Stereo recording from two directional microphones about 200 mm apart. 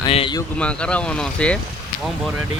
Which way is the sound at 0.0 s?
25° left (ahead or behind).